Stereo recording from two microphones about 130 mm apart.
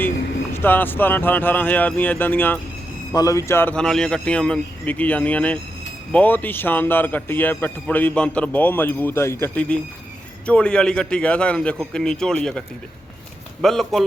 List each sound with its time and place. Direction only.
0.5 s a man's voice: 15° left (ahead or behind)
3.1 s speech: 25° left (ahead or behind)
3.8 s a man's voice: 5° left (ahead or behind)